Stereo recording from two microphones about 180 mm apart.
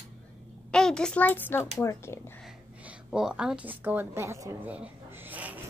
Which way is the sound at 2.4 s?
5° right (ahead or behind).